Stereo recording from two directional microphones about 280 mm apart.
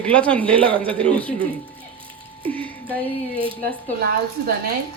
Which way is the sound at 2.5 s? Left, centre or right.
Centre.